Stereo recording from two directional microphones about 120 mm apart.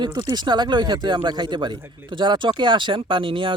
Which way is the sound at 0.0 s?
40° right (ahead or behind).